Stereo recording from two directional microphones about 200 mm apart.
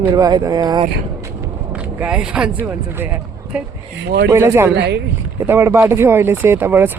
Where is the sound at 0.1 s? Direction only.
20° right (ahead or behind).